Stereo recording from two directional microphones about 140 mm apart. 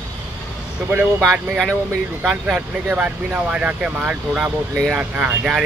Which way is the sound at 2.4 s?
10° right (ahead or behind).